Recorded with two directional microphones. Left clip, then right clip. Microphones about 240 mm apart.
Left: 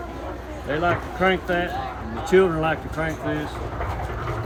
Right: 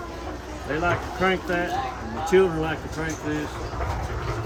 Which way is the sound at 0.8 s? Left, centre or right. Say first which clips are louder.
Left 2 dB; centre.